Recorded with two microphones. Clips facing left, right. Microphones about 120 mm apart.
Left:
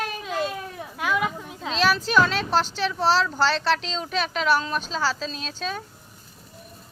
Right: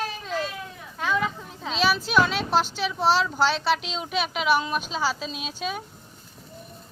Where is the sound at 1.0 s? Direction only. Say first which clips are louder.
Left 1 dB; 10° left (ahead or behind).